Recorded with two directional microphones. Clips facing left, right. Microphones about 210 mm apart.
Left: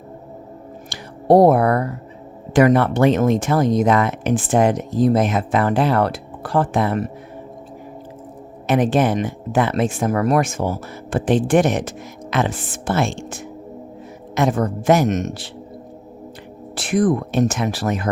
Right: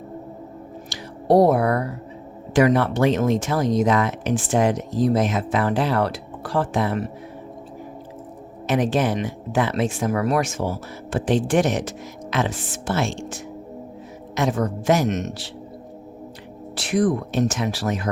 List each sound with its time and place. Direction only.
0.9 s a sound: 50° left (ahead or behind)
2.5 s speech: 55° left (ahead or behind)
8.6 s speech: 55° left (ahead or behind)
16.7 s speech: 50° left (ahead or behind)